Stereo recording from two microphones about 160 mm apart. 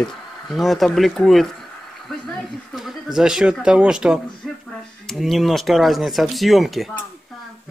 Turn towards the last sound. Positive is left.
turn(degrees=0)  # may be behind; listen again after turning